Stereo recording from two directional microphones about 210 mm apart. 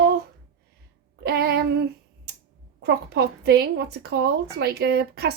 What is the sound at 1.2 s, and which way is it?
Speech, 50° right (ahead or behind).